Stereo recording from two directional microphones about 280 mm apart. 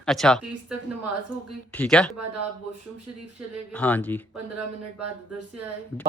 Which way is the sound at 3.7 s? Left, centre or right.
Centre.